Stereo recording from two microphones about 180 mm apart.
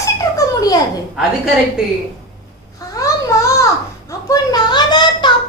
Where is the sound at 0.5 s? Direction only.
20° left (ahead or behind).